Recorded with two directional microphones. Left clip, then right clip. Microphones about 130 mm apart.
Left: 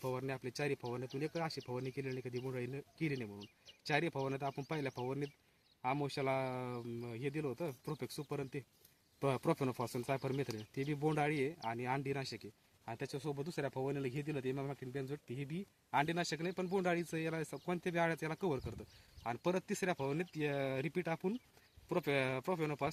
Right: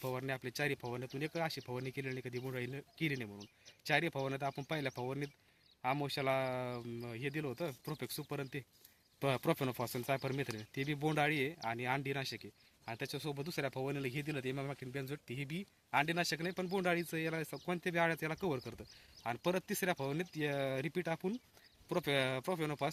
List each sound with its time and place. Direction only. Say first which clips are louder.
0.0 s speech: right 1 dB; 15° right (ahead or behind)